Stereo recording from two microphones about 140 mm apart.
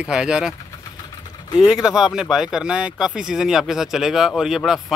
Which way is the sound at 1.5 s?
5° right (ahead or behind).